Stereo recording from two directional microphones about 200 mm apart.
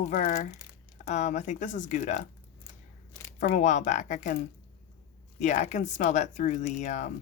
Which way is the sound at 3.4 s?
40° left (ahead or behind).